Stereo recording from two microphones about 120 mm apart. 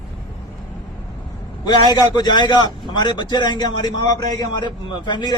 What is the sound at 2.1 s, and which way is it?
A man's voice, 35° left (ahead or behind).